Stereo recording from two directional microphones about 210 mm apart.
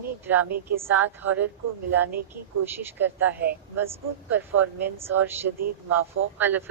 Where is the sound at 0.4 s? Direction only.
45° right (ahead or behind).